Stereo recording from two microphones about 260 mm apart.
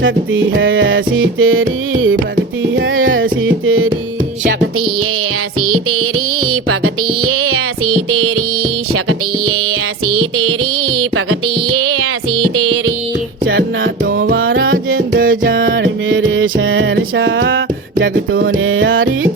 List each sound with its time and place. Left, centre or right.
0.5 s music: right
5.5 s music: right
7.3 s child singing: right
8.9 s music: right
13.4 s music: right
14.0 s music: right
14.3 s music: right
15.2 s music: right
15.7 s music: right
18.6 s music: right